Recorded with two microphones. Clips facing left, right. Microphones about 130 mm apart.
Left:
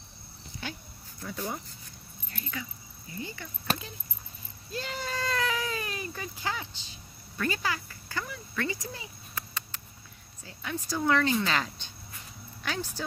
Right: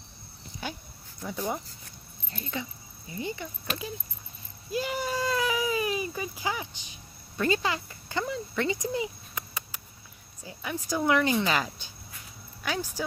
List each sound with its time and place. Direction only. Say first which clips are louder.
1.2 s speech: right 3 dB; 15° right (ahead or behind)
2.3 s speech: right 4 dB; 25° right (ahead or behind)
4.6 s baby cry: right 6 dB; 10° right (ahead or behind)
10.4 s speech: right 1 dB; 10° right (ahead or behind)